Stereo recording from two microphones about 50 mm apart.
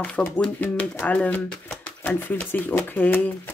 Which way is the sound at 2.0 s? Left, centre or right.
Left.